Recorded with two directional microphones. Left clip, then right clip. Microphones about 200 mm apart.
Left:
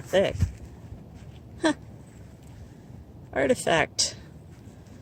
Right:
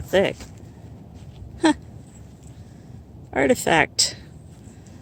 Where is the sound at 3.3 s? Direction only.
40° right (ahead or behind).